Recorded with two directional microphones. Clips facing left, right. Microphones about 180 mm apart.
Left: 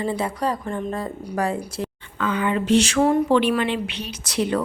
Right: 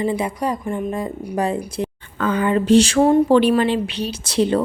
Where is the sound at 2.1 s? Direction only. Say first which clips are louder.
Right 4 dB; 40° right (ahead or behind).